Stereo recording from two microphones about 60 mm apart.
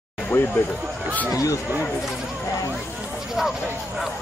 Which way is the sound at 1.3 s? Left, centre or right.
Left.